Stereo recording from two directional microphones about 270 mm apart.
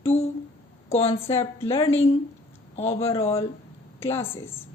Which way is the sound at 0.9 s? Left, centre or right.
Left.